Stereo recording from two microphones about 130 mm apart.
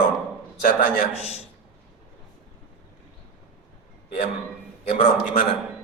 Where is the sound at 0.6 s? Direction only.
90° left.